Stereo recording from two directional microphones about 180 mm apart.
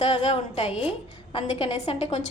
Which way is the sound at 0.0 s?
35° left (ahead or behind).